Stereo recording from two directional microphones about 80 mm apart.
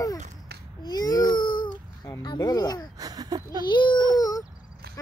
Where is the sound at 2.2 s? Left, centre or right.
Left.